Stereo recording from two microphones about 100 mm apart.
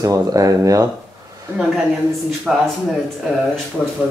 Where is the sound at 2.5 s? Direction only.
5° right (ahead or behind).